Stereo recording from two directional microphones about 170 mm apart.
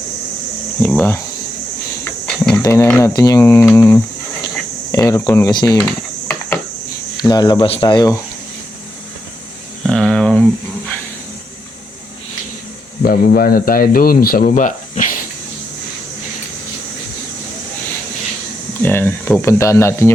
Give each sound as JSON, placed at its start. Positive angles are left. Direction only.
{"t": 0.8, "sound": "speech", "side_deg": 10}
{"t": 2.0, "sound": "a sound", "side_deg": 5}
{"t": 2.6, "sound": "speech", "side_deg": 20}
{"t": 7.2, "sound": "speech", "side_deg": 25}
{"t": 9.8, "sound": "a sound", "side_deg": 5}
{"t": 13.0, "sound": "speech", "side_deg": 60}
{"t": 18.8, "sound": "speech", "side_deg": 10}